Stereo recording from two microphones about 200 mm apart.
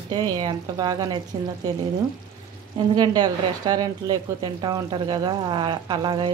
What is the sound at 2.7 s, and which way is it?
A woman's voice, 20° right (ahead or behind).